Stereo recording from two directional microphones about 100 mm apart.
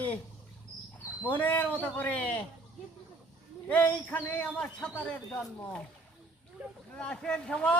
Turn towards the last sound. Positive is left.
turn(degrees=10)  # may be behind; listen again after turning